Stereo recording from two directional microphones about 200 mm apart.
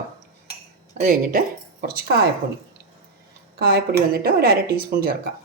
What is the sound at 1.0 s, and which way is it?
Speech, 45° right (ahead or behind).